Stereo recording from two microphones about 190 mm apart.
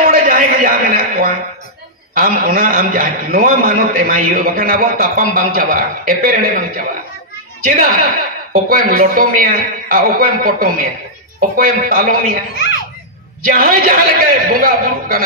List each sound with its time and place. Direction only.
0.0 s a sound: 45° right (ahead or behind)
2.1 s a man's voice: 45° right (ahead or behind)
13.5 s a man's voice: 45° right (ahead or behind)